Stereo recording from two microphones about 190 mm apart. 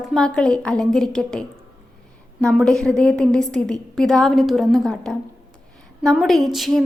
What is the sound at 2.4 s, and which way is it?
A woman's voice, 5° left (ahead or behind).